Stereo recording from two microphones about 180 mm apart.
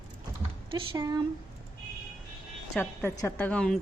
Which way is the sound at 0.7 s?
25° right (ahead or behind).